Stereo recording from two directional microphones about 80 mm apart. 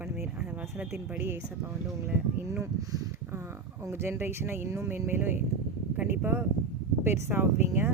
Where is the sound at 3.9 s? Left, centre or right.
Right.